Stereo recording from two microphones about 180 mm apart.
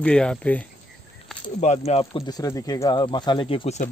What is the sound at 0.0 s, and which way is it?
Speech, 5° left (ahead or behind).